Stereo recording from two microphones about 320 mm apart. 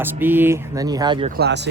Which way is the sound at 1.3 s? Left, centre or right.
Right.